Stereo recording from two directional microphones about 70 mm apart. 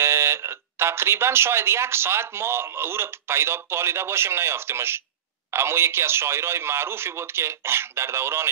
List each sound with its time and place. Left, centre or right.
0.0 s speech: right